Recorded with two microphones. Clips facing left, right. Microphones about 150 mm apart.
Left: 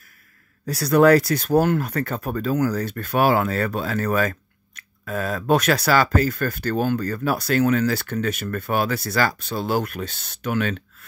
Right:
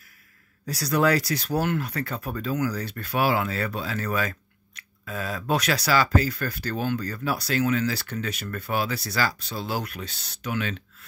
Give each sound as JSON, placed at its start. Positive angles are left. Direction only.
{"t": 0.7, "sound": "speech", "side_deg": 55}